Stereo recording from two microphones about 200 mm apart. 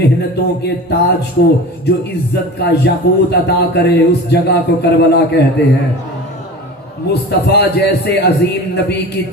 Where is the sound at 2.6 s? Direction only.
55° left (ahead or behind).